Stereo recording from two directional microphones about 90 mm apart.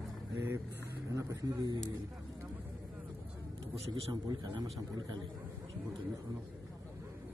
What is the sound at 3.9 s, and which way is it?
Speech, 50° right (ahead or behind).